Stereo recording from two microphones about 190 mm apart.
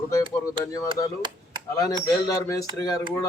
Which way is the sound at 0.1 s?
15° left (ahead or behind).